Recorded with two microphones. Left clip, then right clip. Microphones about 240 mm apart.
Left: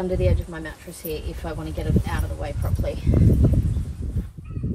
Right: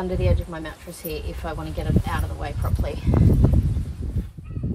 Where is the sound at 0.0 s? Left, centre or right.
Centre.